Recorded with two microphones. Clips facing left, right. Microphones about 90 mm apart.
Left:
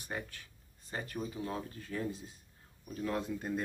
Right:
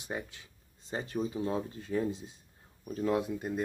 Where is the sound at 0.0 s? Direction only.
20° right (ahead or behind).